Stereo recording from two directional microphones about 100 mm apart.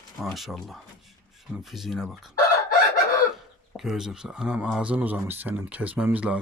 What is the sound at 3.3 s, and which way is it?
Speech, 5° right (ahead or behind).